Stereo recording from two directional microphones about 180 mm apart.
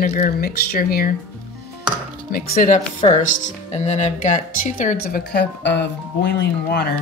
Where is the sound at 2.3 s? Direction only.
50° left (ahead or behind).